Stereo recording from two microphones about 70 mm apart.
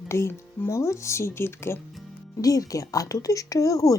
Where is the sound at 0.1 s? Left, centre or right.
Left.